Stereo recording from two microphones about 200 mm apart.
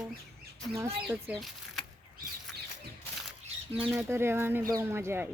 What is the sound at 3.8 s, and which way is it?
Speech, 10° right (ahead or behind).